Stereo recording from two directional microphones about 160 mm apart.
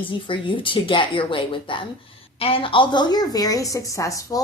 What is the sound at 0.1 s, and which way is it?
A woman's voice, 30° left (ahead or behind).